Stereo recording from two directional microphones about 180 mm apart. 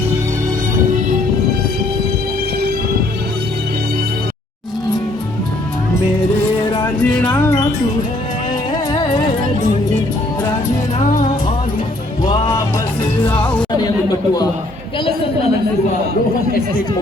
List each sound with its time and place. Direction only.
7.0 s music: 5° left (ahead or behind)
7.3 s music: 15° left (ahead or behind)
8.7 s music: 25° left (ahead or behind)
12.2 s music: 25° left (ahead or behind)
13.3 s music: 5° left (ahead or behind)